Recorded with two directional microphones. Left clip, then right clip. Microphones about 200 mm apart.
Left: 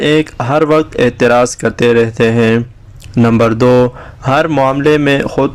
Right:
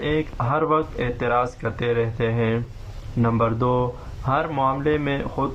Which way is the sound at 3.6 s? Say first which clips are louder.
Left 16 dB; 65° left (ahead or behind).